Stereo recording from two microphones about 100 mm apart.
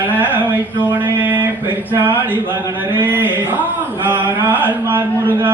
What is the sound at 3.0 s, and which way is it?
Speech, 20° right (ahead or behind).